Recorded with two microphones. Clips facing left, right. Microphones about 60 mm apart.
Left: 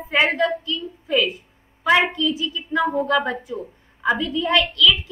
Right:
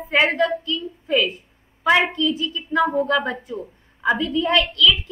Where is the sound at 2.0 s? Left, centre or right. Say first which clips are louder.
Even; right.